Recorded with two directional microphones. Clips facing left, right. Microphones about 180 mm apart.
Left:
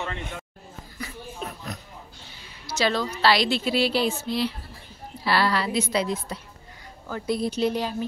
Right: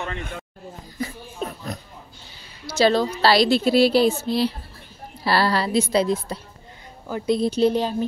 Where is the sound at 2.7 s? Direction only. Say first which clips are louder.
Right 6 dB; 30° right (ahead or behind).